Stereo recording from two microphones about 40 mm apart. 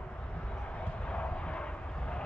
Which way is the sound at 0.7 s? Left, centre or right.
Left.